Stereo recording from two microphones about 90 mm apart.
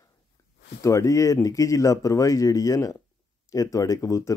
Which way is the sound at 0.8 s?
35° left (ahead or behind).